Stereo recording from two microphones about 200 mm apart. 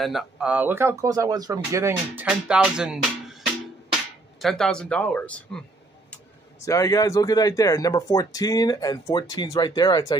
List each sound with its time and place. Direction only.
0.0 s speech: centre (ahead or behind)
4.4 s speech: centre (ahead or behind)
6.6 s speech: 15° left (ahead or behind)